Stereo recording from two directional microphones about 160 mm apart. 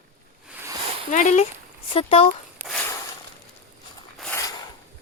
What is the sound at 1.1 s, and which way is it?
Speech, 50° left (ahead or behind).